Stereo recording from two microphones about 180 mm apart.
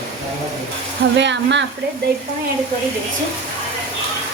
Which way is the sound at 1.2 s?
80° right.